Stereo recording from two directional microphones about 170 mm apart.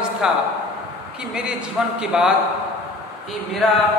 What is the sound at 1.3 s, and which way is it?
A woman's voice, 5° right (ahead or behind).